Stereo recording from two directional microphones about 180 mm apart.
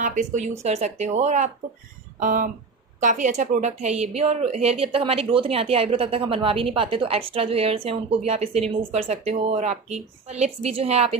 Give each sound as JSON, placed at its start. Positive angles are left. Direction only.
{"t": 0.0, "sound": "a woman's voice", "side_deg": -45}